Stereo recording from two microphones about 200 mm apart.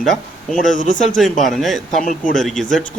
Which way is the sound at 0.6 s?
40° left (ahead or behind).